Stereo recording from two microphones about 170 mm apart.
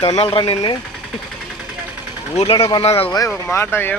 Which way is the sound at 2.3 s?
35° left (ahead or behind).